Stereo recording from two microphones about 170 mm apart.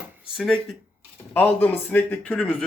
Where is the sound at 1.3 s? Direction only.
10° left (ahead or behind).